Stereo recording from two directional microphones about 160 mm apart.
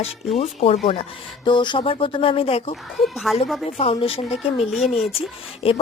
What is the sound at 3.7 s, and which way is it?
Speech, 35° left (ahead or behind).